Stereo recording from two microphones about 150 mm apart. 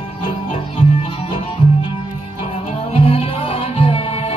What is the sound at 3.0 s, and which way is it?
Music, 40° left (ahead or behind).